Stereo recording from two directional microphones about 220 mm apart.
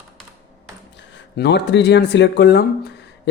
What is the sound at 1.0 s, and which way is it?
Speech, 55° left (ahead or behind).